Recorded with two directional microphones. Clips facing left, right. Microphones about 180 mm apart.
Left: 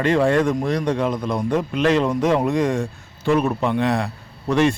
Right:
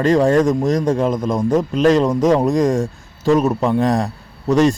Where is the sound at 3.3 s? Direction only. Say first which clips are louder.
Right 4 dB; 35° right (ahead or behind).